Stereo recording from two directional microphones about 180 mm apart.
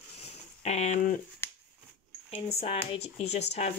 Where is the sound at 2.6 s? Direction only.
35° left (ahead or behind).